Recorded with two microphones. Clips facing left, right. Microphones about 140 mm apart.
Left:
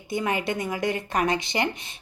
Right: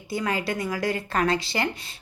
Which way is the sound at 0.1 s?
20° left (ahead or behind).